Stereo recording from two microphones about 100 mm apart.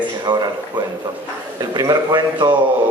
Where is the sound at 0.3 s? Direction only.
40° right (ahead or behind).